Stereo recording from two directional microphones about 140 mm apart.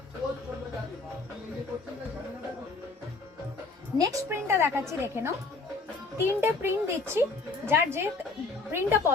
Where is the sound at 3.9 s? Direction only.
25° right (ahead or behind).